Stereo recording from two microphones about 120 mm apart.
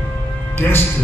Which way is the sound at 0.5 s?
20° left (ahead or behind).